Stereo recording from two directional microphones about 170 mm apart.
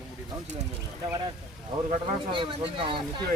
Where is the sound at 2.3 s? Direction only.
30° right (ahead or behind).